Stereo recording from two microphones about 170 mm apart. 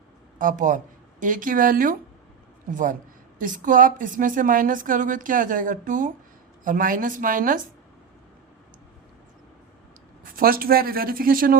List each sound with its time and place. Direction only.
0.3 s a woman's voice: 50° right (ahead or behind)
10.3 s speech: 60° right (ahead or behind)